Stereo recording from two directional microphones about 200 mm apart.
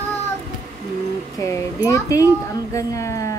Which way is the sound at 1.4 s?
15° left (ahead or behind).